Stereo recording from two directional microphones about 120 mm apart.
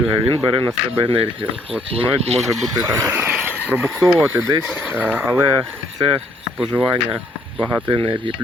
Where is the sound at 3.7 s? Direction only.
20° right (ahead or behind).